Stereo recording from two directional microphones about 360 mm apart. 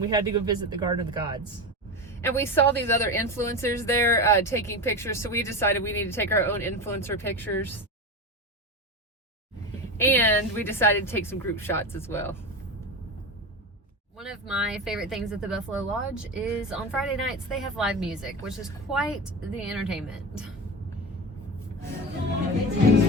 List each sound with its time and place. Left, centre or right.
0.1 s speech: centre
2.0 s a woman's voice: centre
10.0 s a woman's voice: centre
14.2 s speech: centre